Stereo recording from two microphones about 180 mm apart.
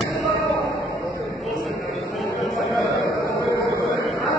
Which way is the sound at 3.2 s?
15° left (ahead or behind).